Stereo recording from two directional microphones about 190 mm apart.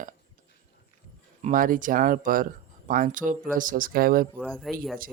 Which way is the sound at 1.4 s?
40° right (ahead or behind).